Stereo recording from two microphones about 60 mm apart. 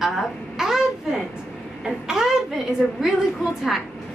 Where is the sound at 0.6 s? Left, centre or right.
Centre.